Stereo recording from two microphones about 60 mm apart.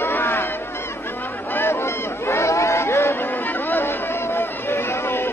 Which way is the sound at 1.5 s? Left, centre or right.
Left.